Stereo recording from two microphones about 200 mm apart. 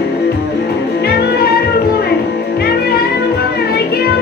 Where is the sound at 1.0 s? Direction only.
50° left (ahead or behind).